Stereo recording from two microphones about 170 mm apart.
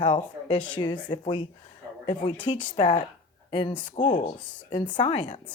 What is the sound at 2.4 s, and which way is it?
Speech, 30° left (ahead or behind).